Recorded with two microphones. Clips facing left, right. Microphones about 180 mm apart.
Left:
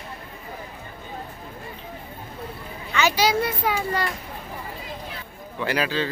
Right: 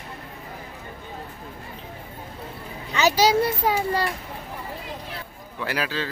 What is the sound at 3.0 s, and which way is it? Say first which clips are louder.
A child's voice: right 2 dB; 35° right (ahead or behind).